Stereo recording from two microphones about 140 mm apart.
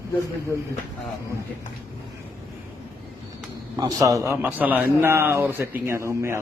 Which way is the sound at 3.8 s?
25° right (ahead or behind).